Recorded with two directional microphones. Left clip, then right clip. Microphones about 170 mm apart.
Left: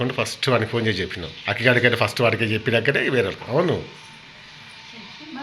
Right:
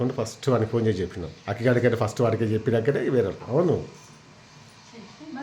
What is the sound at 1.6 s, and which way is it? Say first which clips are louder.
Speech: left 4 dB; 15° right (ahead or behind).